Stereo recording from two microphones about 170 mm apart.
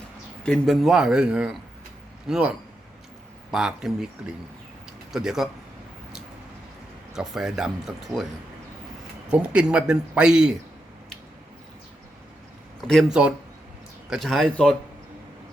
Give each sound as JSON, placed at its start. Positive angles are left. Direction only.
{"t": 0.4, "sound": "a man's voice", "side_deg": 5}
{"t": 3.5, "sound": "speech", "side_deg": -5}
{"t": 5.1, "sound": "speech", "side_deg": 0}
{"t": 7.1, "sound": "speech", "side_deg": -5}
{"t": 9.3, "sound": "speech", "side_deg": -5}
{"t": 12.9, "sound": "speech", "side_deg": 0}